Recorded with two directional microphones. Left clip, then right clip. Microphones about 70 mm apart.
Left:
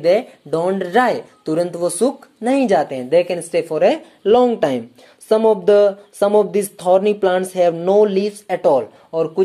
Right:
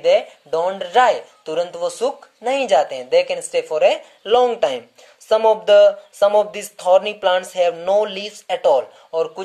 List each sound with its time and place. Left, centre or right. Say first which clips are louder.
0.0 s speech: even; left
2.4 s speech: left 1 dB; left